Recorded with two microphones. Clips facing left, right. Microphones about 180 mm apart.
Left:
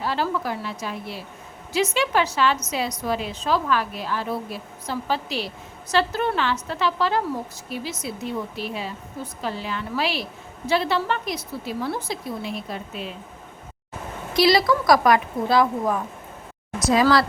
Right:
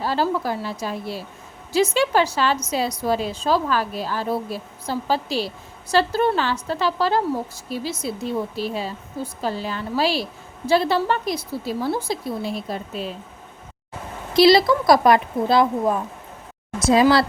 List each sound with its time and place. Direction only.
0.0 s a woman's voice: 35° right (ahead or behind)
14.3 s speech: 25° right (ahead or behind)